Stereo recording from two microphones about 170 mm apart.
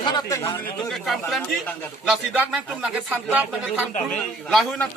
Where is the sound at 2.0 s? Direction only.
5° right (ahead or behind).